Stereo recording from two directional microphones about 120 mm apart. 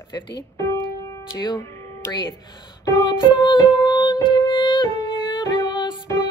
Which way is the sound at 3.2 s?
40° left (ahead or behind).